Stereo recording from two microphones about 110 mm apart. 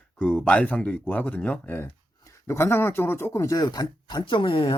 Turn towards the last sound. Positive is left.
turn(degrees=50)  # may be behind; listen again after turning